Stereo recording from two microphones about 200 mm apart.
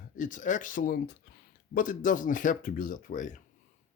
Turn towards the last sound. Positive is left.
turn(degrees=40)  # may be behind; listen again after turning